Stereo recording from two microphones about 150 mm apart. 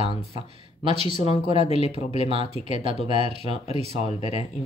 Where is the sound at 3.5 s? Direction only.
45° left (ahead or behind).